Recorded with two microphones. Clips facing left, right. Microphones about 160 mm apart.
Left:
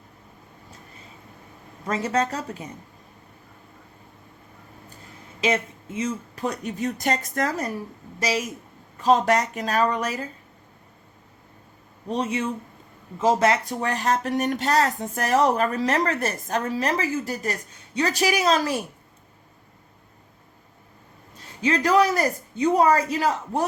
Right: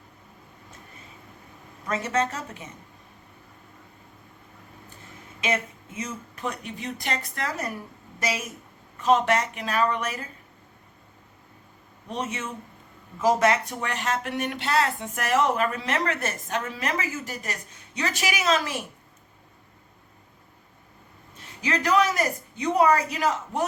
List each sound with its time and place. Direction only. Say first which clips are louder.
1.9 s speech: left 2 dB; 30° left (ahead or behind)
5.4 s speech: left 4 dB; 30° left (ahead or behind)
9.0 s speech: left 2 dB; 35° left (ahead or behind)
12.0 s speech: left 6 dB; 35° left (ahead or behind)
21.6 s speech: left 3 dB; 30° left (ahead or behind)